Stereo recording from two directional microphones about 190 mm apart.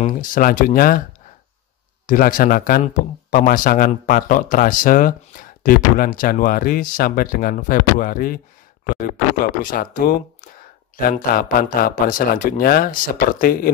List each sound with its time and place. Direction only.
0.0 s speech: 45° left (ahead or behind)
2.0 s speech: 45° left (ahead or behind)